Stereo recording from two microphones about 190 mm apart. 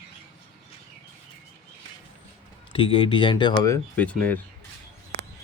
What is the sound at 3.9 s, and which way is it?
Speech, 5° left (ahead or behind).